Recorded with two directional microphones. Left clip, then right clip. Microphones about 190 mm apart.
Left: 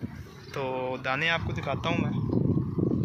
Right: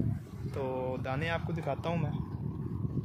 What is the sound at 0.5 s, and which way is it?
Speech, 5° right (ahead or behind).